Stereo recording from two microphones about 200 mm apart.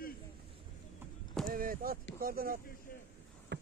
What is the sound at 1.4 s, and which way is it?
Speech, 45° right (ahead or behind).